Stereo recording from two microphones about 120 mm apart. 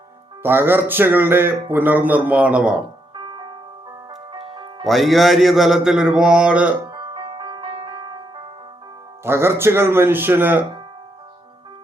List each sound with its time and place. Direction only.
0.4 s speech: 15° right (ahead or behind)
4.4 s music: 45° right (ahead or behind)
4.8 s music: centre (ahead or behind)
6.8 s music: 35° right (ahead or behind)
9.2 s speech: 20° right (ahead or behind)